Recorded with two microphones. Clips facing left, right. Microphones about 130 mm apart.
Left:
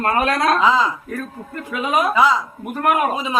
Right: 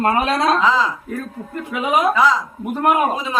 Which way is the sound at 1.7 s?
15° right (ahead or behind).